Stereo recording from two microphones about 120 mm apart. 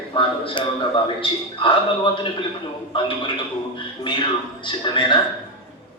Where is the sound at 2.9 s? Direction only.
45° left (ahead or behind).